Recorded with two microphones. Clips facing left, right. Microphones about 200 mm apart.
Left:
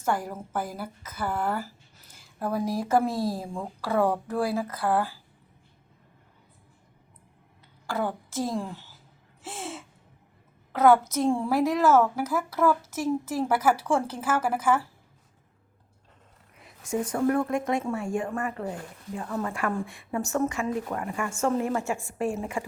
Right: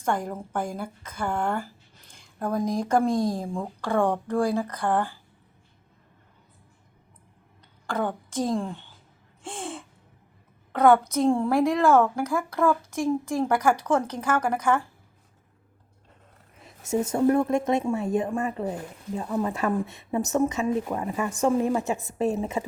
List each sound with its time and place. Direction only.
0.0 s speech: 5° left (ahead or behind)
7.9 s a woman's voice: centre (ahead or behind)
9.4 s gasp: 5° left (ahead or behind)
10.7 s speech: 5° left (ahead or behind)
16.6 s a woman's voice: 25° right (ahead or behind)